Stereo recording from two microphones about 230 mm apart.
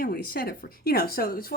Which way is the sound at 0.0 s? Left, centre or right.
Left.